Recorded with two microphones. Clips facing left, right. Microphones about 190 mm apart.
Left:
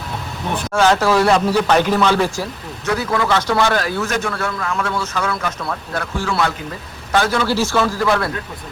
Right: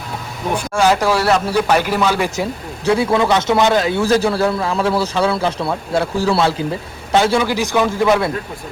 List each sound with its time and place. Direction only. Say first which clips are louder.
0.5 s speech: even; 10° right (ahead or behind)
2.3 s speech: right 4 dB; 25° right (ahead or behind)
7.1 s speech: right 3 dB; 20° right (ahead or behind)